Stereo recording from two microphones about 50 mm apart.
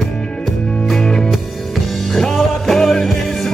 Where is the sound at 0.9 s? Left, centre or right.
Centre.